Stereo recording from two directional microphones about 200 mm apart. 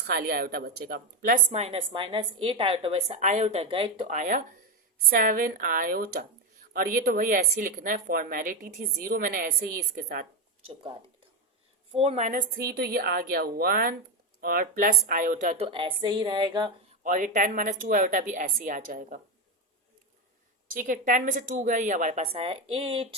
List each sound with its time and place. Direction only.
0.1 s a woman's voice: 50° right (ahead or behind); by 4.1 s 25° right (ahead or behind)
4.1 s a woman's voice: 40° right (ahead or behind)
11.9 s a woman's voice: 30° right (ahead or behind)
17.0 s a woman's voice: 40° right (ahead or behind)
20.7 s a woman's voice: 40° right (ahead or behind)